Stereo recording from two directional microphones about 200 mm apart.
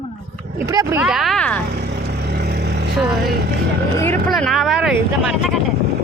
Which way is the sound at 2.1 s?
55° right (ahead or behind).